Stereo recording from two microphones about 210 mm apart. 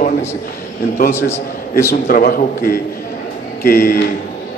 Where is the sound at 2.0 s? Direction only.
45° left (ahead or behind).